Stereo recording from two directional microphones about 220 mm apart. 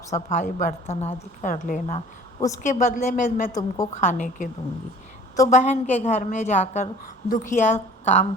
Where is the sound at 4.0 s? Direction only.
35° left (ahead or behind).